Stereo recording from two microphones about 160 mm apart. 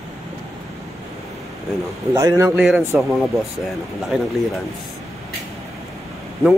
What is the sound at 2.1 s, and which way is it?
Speech, 20° right (ahead or behind).